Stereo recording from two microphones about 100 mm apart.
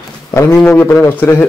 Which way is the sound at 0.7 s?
20° left (ahead or behind).